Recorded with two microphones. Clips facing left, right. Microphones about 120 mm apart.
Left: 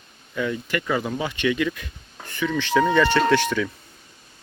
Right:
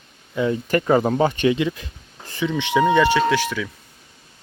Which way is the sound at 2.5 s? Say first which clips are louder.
Right 2 dB; 20° right (ahead or behind).